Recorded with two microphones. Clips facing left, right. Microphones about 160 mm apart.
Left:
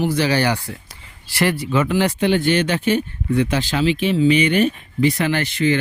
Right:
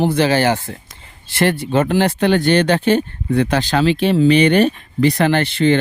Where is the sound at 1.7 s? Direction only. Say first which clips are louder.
Right 3 dB; 60° right (ahead or behind).